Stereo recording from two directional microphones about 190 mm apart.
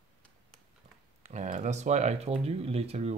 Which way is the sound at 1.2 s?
40° right (ahead or behind).